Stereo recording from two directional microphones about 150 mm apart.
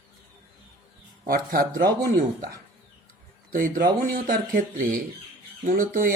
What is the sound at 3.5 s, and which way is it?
A man's voice, 65° right (ahead or behind).